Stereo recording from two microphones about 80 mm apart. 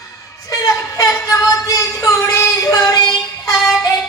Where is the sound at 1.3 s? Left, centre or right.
Left.